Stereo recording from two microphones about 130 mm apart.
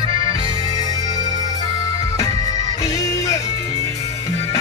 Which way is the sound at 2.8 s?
30° left (ahead or behind).